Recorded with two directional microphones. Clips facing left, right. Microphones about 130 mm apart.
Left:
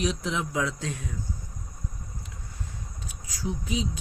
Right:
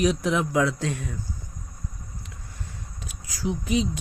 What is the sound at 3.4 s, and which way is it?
Speech, 70° right (ahead or behind).